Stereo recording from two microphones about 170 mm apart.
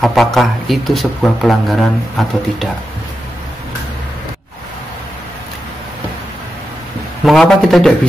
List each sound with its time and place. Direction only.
0.0 s speech: centre (ahead or behind)
7.2 s speech: centre (ahead or behind)